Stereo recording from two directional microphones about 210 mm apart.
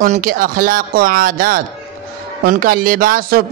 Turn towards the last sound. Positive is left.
turn(degrees=-45)  # may be behind; listen again after turning